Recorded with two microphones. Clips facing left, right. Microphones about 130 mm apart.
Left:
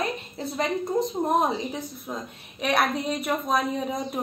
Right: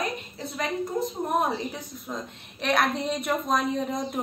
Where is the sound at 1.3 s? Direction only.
15° left (ahead or behind).